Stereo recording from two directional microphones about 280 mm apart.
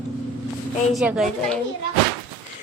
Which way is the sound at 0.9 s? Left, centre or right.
Centre.